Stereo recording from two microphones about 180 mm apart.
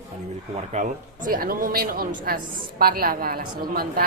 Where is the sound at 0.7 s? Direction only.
45° right (ahead or behind).